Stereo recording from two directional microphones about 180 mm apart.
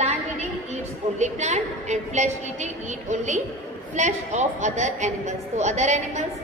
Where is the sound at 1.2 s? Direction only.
40° right (ahead or behind).